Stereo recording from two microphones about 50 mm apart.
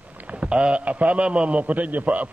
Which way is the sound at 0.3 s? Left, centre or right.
Right.